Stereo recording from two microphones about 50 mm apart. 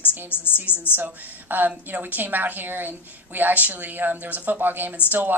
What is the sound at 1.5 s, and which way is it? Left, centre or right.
Speech, right.